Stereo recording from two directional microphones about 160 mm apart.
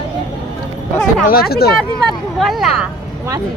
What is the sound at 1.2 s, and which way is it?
Speech, 70° left (ahead or behind).